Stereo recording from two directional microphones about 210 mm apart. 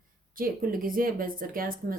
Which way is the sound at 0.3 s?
40° right (ahead or behind).